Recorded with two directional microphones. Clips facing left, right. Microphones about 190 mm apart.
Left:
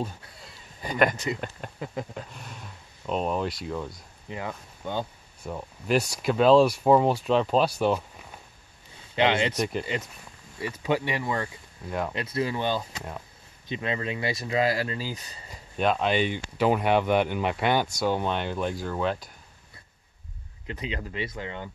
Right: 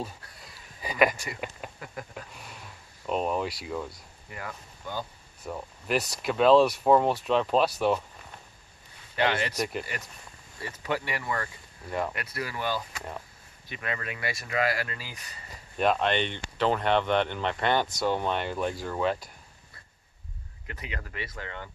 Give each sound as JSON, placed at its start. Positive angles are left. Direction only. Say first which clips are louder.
{"t": 0.7, "sound": "speech", "louder": "left 1 dB", "side_deg": -5}
{"t": 1.1, "sound": "speech", "louder": "left 9 dB", "side_deg": 20}
{"t": 1.6, "sound": "speech", "louder": "left 1 dB", "side_deg": -5}
{"t": 2.3, "sound": "a sound", "louder": "left 3 dB", "side_deg": -5}
{"t": 3.1, "sound": "speech", "louder": "left 1 dB", "side_deg": -5}
{"t": 4.3, "sound": "speech", "louder": "left 5 dB", "side_deg": 20}
{"t": 5.4, "sound": "speech", "louder": "left 1 dB", "side_deg": 0}
{"t": 9.1, "sound": "speech", "louder": "left 4 dB", "side_deg": 20}
{"t": 9.6, "sound": "speech", "louder": "left 3 dB", "side_deg": 0}
{"t": 10.6, "sound": "speech", "louder": "left 5 dB", "side_deg": 15}
{"t": 15.8, "sound": "speech", "louder": "left 1 dB", "side_deg": 0}
{"t": 20.6, "sound": "speech", "louder": "left 6 dB", "side_deg": 20}